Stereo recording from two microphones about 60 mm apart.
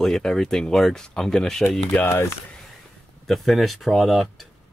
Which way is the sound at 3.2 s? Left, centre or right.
Centre.